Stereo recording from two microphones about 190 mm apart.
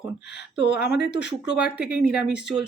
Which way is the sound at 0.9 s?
65° left (ahead or behind).